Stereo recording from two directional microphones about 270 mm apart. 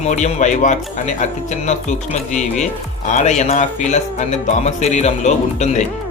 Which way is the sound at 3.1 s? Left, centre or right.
Left.